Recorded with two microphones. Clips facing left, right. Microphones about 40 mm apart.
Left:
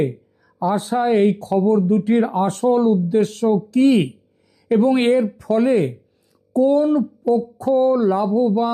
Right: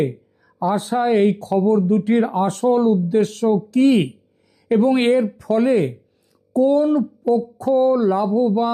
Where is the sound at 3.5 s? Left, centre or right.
Centre.